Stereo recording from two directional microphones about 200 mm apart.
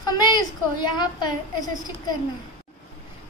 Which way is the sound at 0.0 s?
20° left (ahead or behind).